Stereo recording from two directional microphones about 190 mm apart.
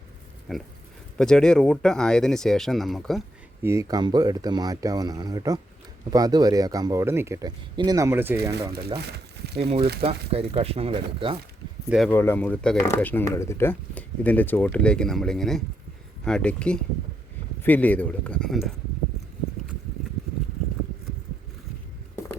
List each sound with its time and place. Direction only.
0.5 s speech: centre (ahead or behind)
3.6 s a man's voice: 15° right (ahead or behind)
9.0 s crumpling: 60° right (ahead or behind)
10.0 s speech: 30° right (ahead or behind)
11.9 s speech: centre (ahead or behind)
12.1 s speech: 10° left (ahead or behind)